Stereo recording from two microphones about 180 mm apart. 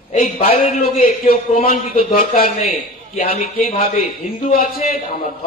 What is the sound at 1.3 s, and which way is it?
Speech, 50° left (ahead or behind).